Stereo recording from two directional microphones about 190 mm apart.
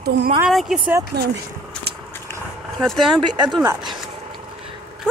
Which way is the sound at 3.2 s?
25° right (ahead or behind).